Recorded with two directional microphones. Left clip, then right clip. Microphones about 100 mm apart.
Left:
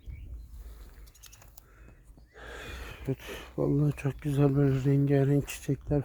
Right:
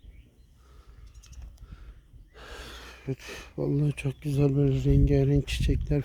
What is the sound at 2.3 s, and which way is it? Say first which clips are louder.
Neigh: left 1 dB; 10° right (ahead or behind).